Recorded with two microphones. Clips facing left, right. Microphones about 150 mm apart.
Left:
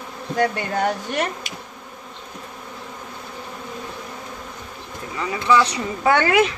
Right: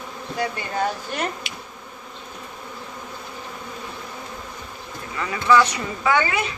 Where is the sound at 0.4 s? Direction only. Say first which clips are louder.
Left 4 dB; 75° left (ahead or behind).